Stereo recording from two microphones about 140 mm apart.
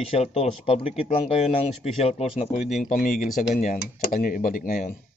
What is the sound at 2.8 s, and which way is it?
Speech, 70° left (ahead or behind).